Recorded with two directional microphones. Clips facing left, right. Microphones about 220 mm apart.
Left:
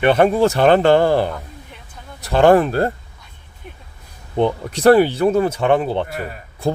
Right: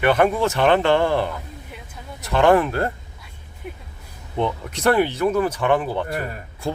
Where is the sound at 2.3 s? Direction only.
35° left (ahead or behind).